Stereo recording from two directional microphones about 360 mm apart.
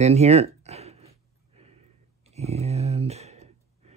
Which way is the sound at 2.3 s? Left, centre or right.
Centre.